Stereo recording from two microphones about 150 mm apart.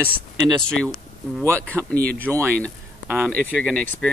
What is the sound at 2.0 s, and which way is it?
Speech, 10° left (ahead or behind).